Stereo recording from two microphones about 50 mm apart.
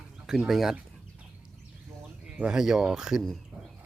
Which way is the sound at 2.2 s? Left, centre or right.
Right.